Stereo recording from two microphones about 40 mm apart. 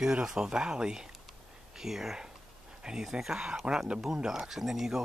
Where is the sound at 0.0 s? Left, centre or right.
Centre.